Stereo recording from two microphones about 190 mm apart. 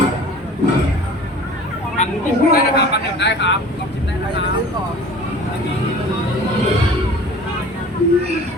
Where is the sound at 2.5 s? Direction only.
60° left (ahead or behind).